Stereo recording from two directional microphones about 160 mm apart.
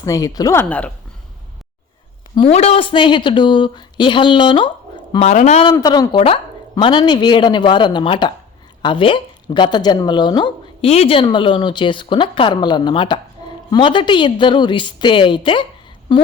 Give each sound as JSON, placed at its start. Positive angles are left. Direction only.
{"t": 0.0, "sound": "speech", "side_deg": 20}
{"t": 2.3, "sound": "speech", "side_deg": 35}
{"t": 5.2, "sound": "speech", "side_deg": 45}
{"t": 5.7, "sound": "speech", "side_deg": 25}